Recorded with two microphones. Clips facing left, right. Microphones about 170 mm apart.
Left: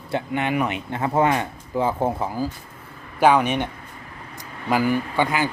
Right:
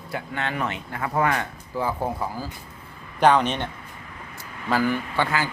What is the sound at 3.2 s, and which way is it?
Speech, 10° left (ahead or behind).